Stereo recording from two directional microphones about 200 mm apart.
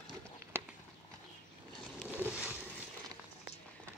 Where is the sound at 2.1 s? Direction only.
10° right (ahead or behind).